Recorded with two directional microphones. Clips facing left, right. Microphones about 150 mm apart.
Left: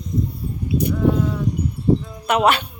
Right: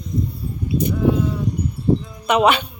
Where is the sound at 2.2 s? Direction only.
5° left (ahead or behind).